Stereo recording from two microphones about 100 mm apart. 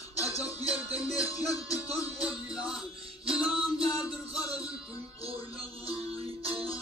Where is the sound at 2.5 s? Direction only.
10° right (ahead or behind).